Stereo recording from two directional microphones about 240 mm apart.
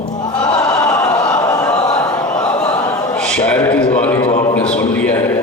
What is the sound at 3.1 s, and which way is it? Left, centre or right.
A man's voice, centre.